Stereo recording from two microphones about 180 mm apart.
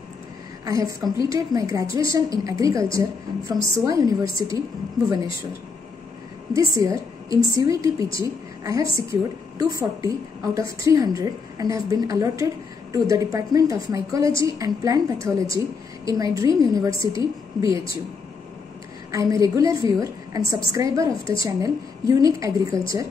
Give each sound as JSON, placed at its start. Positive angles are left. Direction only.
{"t": 0.7, "sound": "a woman's voice", "side_deg": -20}
{"t": 6.5, "sound": "a woman's voice", "side_deg": -20}
{"t": 19.1, "sound": "a woman's voice", "side_deg": -20}